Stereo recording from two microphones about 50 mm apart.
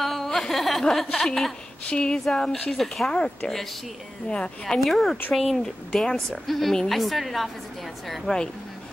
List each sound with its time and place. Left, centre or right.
0.0 s a sound: centre
0.8 s speech: centre
1.9 s speech: left
2.1 s a woman's voice: centre
4.3 s speech: centre
4.7 s a woman's voice: centre
8.1 s speech: centre